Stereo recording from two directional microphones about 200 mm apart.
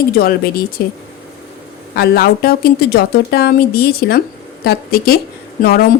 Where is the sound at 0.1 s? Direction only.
50° left (ahead or behind).